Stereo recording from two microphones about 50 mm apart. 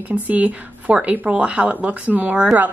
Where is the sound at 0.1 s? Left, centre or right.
Right.